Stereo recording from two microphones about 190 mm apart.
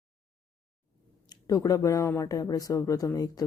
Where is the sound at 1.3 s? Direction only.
20° left (ahead or behind).